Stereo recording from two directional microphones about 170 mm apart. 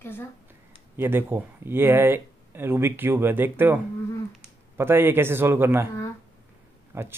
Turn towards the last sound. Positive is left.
turn(degrees=-15)  # may be behind; listen again after turning